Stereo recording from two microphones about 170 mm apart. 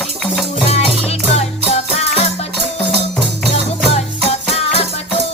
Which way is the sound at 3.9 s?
35° left (ahead or behind).